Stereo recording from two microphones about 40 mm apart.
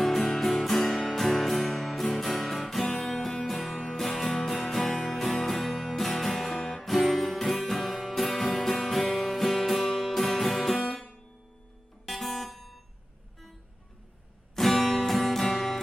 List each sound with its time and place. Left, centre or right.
0.0 s music: centre
3.1 s music: centre
10.8 s music: left
12.0 s music: centre
14.5 s music: centre